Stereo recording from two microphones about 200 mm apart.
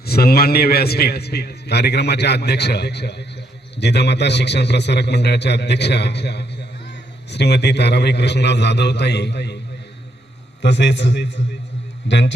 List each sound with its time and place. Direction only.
0.0 s a man's voice: 50° left (ahead or behind)
10.6 s a man's voice: 60° left (ahead or behind)